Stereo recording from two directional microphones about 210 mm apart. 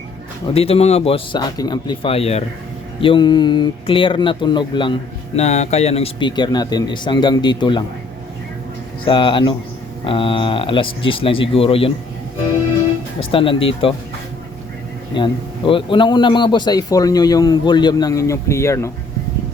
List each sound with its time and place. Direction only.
0.5 s a man's voice: 30° left (ahead or behind)
9.0 s a man's voice: 25° left (ahead or behind)
13.1 s a man's voice: 25° left (ahead or behind)
15.1 s a man's voice: 25° left (ahead or behind)